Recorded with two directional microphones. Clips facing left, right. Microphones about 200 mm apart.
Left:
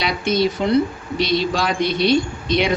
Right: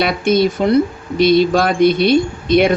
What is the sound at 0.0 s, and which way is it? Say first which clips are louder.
Speech: right 5 dB; 55° right (ahead or behind).